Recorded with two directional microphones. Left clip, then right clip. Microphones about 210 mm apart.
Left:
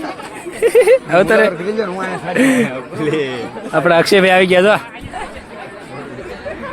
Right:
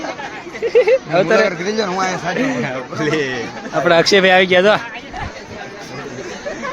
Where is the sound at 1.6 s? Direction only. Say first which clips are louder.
Right 1 dB; 20° right (ahead or behind).